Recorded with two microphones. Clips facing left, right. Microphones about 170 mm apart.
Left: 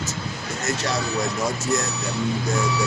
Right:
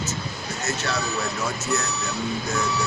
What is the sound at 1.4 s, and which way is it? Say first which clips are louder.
Speech: left 3 dB; 35° left (ahead or behind).